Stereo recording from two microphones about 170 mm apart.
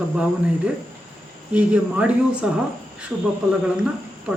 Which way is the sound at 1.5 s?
5° right (ahead or behind).